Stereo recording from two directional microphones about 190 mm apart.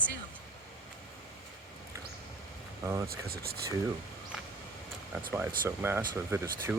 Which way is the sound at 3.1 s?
55° right (ahead or behind).